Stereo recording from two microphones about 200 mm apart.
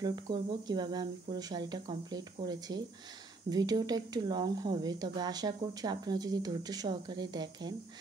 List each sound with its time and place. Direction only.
0.0 s speech: 20° right (ahead or behind)